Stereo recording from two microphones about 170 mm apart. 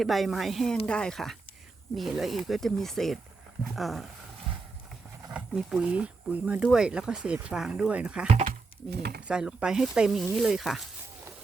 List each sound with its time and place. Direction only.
0.0 s speech: centre (ahead or behind)
5.3 s speech: 5° right (ahead or behind)
9.0 s speech: 65° right (ahead or behind)
9.2 s speech: 5° right (ahead or behind)